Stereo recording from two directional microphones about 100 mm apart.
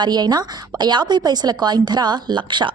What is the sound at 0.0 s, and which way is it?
A woman's voice, 45° right (ahead or behind).